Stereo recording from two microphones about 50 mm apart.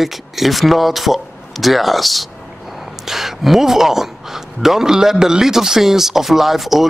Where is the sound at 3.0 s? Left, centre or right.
Centre.